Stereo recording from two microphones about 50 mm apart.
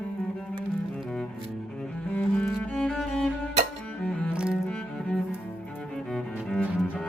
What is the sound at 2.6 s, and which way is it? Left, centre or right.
Music, centre.